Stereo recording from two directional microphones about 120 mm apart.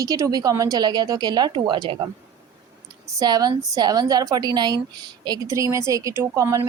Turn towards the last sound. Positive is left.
turn(degrees=-25)  # may be behind; listen again after turning